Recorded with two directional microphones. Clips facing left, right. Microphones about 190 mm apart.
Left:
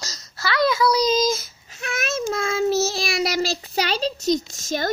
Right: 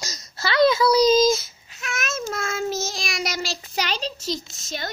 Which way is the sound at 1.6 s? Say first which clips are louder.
Left 3 dB; 35° left (ahead or behind).